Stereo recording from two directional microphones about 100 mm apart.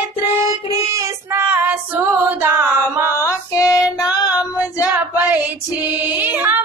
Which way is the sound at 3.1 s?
30° left (ahead or behind).